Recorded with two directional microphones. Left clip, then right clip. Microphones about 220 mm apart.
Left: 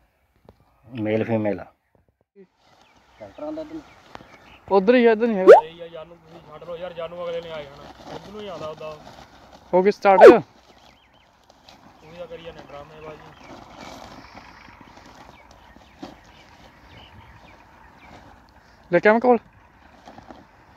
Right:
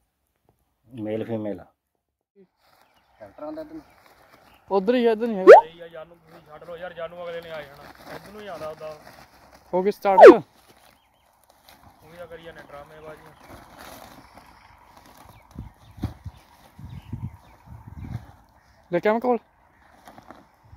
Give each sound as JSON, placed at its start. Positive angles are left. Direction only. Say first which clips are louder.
{"t": 0.9, "sound": "speech", "louder": "left 6 dB", "side_deg": 5}
{"t": 3.3, "sound": "speech", "louder": "left 3 dB", "side_deg": -10}
{"t": 4.6, "sound": "speech", "louder": "left 5 dB", "side_deg": -15}
{"t": 5.7, "sound": "speech", "louder": "left 3 dB", "side_deg": 45}
{"t": 7.8, "sound": "speech", "louder": "left 2 dB", "side_deg": -5}
{"t": 8.4, "sound": "speech", "louder": "left 2 dB", "side_deg": 45}
{"t": 9.0, "sound": "a sound", "louder": "left 3 dB", "side_deg": -10}
{"t": 9.7, "sound": "speech", "louder": "left 5 dB", "side_deg": -5}
{"t": 12.2, "sound": "speech", "louder": "left 4 dB", "side_deg": 45}
{"t": 13.4, "sound": "vehicle", "louder": "left 3 dB", "side_deg": -10}
{"t": 14.4, "sound": "vehicle", "louder": "left 6 dB", "side_deg": -55}
{"t": 18.9, "sound": "speech", "louder": "left 6 dB", "side_deg": -5}
{"t": 20.1, "sound": "boat", "louder": "left 2 dB", "side_deg": -5}